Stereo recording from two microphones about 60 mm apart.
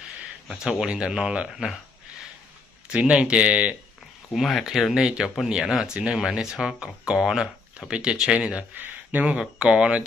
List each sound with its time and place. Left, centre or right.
0.7 s speech: centre
2.9 s speech: centre
4.3 s speech: centre
8.7 s speech: right
9.4 s speech: centre